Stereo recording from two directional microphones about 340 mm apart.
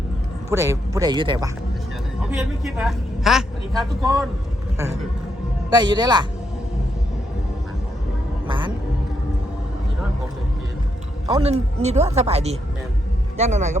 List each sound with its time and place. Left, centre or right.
0.5 s speech: centre
2.4 s a woman's voice: centre
5.7 s speech: centre
8.4 s music: centre
11.3 s speech: centre